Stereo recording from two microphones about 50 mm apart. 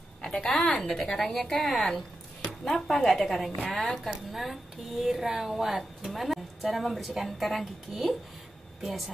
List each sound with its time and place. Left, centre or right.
0.2 s a woman's voice: centre